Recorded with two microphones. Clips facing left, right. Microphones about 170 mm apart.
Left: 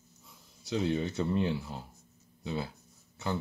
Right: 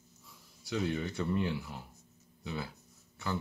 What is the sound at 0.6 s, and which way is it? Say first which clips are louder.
Speech: left 3 dB; 25° left (ahead or behind).